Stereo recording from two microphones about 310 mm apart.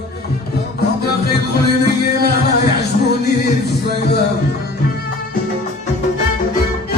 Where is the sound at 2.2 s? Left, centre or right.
Left.